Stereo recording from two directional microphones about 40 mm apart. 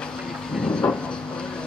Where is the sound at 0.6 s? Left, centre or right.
Left.